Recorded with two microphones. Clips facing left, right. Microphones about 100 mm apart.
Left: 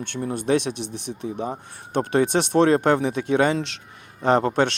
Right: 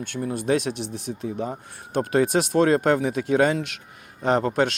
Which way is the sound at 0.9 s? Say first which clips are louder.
Even; 70° left (ahead or behind).